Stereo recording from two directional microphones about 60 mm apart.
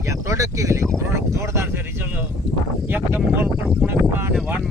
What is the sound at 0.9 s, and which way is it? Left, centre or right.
Speech, right.